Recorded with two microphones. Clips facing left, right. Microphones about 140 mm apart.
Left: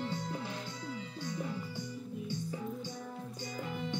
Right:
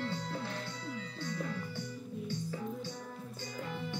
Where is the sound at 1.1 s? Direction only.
15° left (ahead or behind).